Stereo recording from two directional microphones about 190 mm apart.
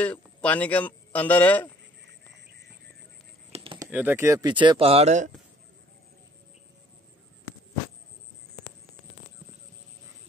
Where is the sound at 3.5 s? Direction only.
30° right (ahead or behind).